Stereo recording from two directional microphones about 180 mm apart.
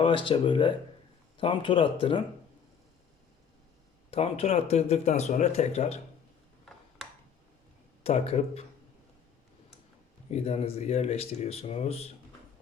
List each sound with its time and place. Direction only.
0.0 s speech: 30° left (ahead or behind)
4.1 s speech: 35° left (ahead or behind)
6.7 s mechanisms: centre (ahead or behind)
8.0 s speech: 35° left (ahead or behind)
10.2 s speech: 35° left (ahead or behind)